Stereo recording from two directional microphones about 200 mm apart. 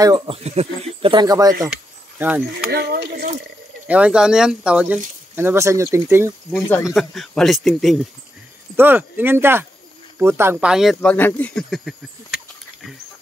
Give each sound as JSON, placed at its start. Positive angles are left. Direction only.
{"t": 0.0, "sound": "speech", "side_deg": -20}
{"t": 2.7, "sound": "speech", "side_deg": -55}
{"t": 3.8, "sound": "speech", "side_deg": -5}
{"t": 6.9, "sound": "speech", "side_deg": 0}